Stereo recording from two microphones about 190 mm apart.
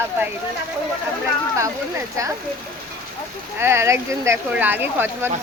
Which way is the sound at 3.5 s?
15° right (ahead or behind).